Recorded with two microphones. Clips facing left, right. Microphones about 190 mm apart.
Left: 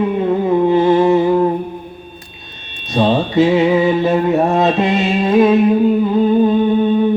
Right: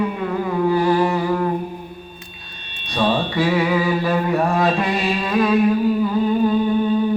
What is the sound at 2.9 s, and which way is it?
Mantra, 25° left (ahead or behind).